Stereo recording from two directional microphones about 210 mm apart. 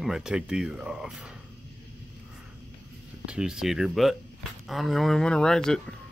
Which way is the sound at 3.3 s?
5° right (ahead or behind).